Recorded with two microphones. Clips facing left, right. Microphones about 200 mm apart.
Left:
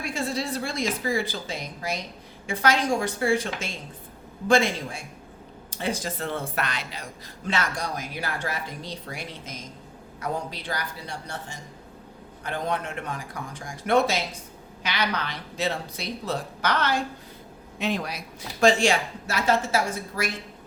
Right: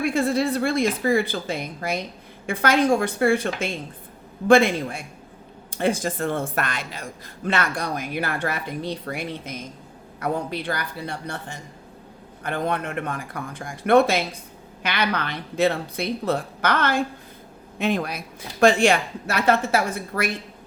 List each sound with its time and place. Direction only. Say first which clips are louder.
0.0 s speech: right 8 dB; 55° right (ahead or behind)